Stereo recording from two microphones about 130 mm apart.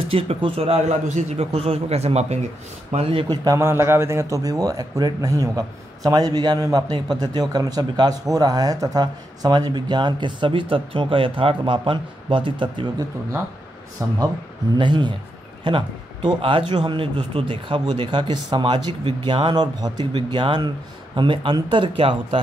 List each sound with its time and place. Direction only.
0.1 s a man's voice: 45° right (ahead or behind)
3.3 s a man's voice: 25° right (ahead or behind); by 12.8 s 40° right (ahead or behind)
14.0 s speech: 25° right (ahead or behind)
14.8 s a man's voice: 35° right (ahead or behind)